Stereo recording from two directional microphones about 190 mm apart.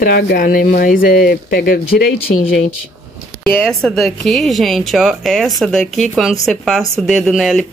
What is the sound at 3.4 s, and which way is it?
Speech, 5° left (ahead or behind).